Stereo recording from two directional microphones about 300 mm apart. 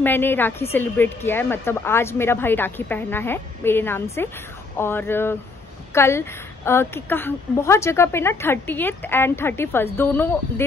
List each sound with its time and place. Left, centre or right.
0.0 s speech: centre